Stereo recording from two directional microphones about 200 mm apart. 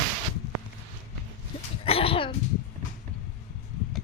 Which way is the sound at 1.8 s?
30° left (ahead or behind).